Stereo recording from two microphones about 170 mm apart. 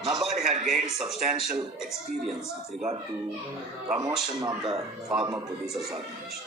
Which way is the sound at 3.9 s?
20° right (ahead or behind).